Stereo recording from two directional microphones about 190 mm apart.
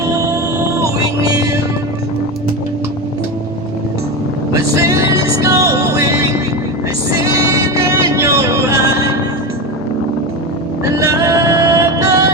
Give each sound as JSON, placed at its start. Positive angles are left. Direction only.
{"t": 0.0, "sound": "music", "side_deg": -15}
{"t": 4.5, "sound": "music", "side_deg": -15}
{"t": 10.8, "sound": "vehicle", "side_deg": -15}